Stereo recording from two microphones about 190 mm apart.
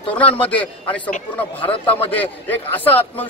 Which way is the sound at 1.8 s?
10° left (ahead or behind).